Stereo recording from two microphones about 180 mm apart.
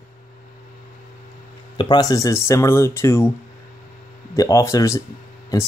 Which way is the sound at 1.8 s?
25° left (ahead or behind).